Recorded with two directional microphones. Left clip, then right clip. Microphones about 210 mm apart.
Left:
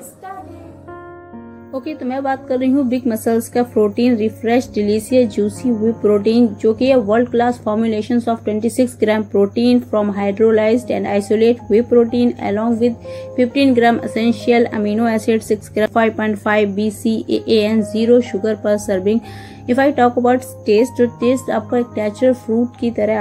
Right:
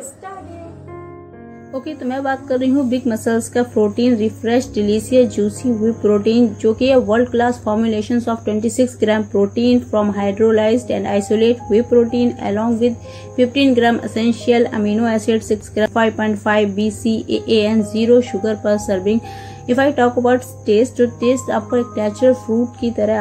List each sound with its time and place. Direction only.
1.7 s a woman's voice: 15° left (ahead or behind)